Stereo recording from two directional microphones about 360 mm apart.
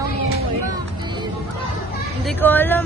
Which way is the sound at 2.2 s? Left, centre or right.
Centre.